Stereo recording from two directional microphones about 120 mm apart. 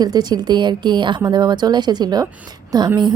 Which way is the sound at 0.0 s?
35° right (ahead or behind).